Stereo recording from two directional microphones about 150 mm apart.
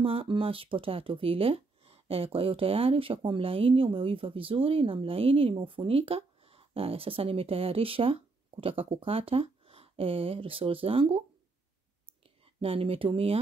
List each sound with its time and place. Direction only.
0.0 s speech: 35° right (ahead or behind)
12.5 s speech: 40° right (ahead or behind)